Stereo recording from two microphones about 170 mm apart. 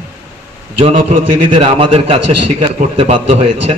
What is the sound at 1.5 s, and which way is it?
A man's voice, 35° right (ahead or behind).